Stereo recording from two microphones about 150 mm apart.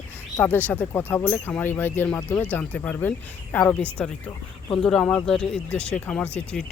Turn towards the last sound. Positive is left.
turn(degrees=5)  # may be behind; listen again after turning